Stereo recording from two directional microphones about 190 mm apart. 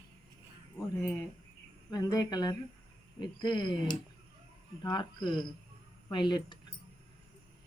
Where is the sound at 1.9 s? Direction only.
20° left (ahead or behind).